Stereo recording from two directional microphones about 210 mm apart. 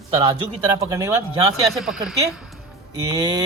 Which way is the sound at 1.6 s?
Centre (ahead or behind).